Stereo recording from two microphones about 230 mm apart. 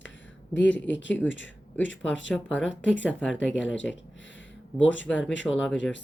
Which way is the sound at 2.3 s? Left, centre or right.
Centre.